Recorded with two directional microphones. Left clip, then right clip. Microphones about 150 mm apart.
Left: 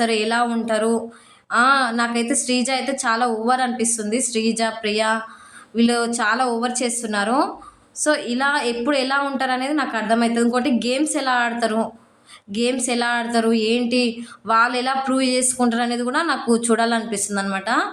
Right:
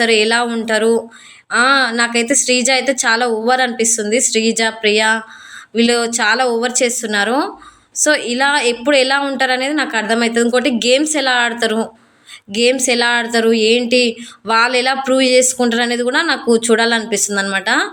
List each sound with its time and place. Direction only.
0.0 s speech: 20° right (ahead or behind)